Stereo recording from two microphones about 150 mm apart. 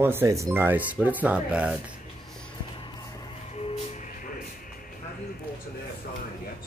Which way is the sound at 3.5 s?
45° left (ahead or behind).